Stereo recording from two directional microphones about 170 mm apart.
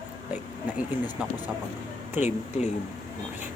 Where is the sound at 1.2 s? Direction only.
5° right (ahead or behind).